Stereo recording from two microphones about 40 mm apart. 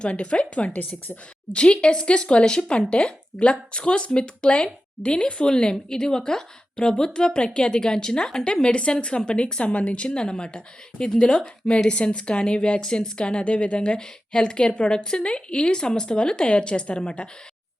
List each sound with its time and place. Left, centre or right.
0.0 s a woman's voice: left
0.7 s a woman's voice: left
1.5 s a woman's voice: left
8.6 s a woman's voice: left
10.2 s a woman's voice: centre